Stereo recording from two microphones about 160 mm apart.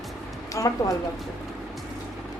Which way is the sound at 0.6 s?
20° left (ahead or behind).